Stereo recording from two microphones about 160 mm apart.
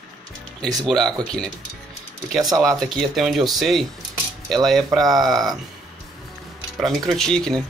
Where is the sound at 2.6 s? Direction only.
5° left (ahead or behind).